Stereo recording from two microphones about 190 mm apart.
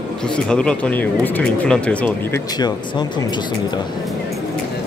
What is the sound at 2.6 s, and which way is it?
Speech, 20° left (ahead or behind).